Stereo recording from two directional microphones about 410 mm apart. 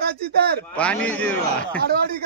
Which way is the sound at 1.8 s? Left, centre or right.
Right.